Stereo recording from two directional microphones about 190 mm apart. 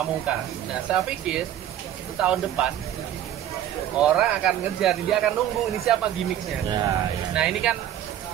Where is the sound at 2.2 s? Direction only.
5° right (ahead or behind).